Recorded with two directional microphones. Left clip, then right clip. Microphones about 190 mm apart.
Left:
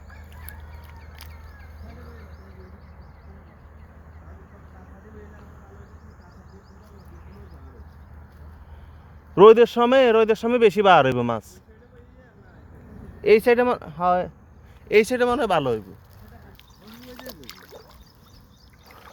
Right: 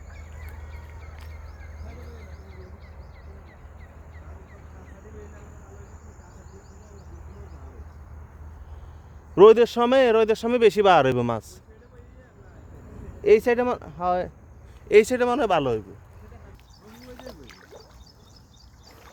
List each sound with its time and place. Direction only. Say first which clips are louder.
9.3 s speech: left 2 dB; 10° left (ahead or behind)
13.2 s speech: left 2 dB; 15° left (ahead or behind)
14.8 s speech: right 1 dB; 5° left (ahead or behind)
15.3 s speech: left 1 dB; 20° left (ahead or behind)
17.2 s rowboat: left 4 dB; 70° left (ahead or behind)